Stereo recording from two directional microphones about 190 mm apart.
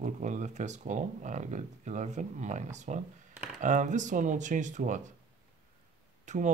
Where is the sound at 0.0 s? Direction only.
40° right (ahead or behind).